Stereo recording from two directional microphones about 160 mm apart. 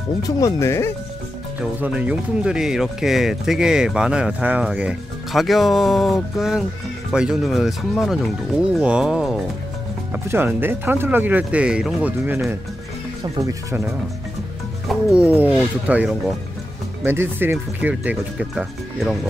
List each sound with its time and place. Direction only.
0.4 s speech: 15° left (ahead or behind)
1.6 s speech: 5° right (ahead or behind)
10.1 s speech: 15° right (ahead or behind)
14.9 s speech: 5° right (ahead or behind)